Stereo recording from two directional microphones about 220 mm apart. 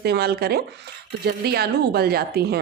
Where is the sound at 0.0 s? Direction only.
45° right (ahead or behind).